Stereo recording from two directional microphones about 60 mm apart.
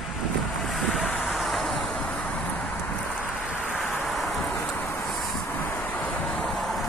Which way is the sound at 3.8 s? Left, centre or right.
Centre.